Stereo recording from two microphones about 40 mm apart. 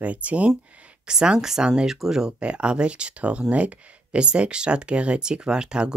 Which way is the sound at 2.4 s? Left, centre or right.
Right.